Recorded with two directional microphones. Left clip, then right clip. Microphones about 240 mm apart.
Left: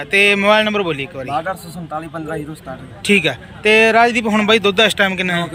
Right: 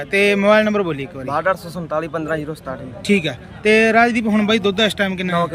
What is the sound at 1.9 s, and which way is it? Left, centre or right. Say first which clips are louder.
Speech: right 3 dB; right.